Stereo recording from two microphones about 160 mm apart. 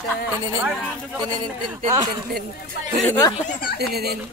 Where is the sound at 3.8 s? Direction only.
80° right.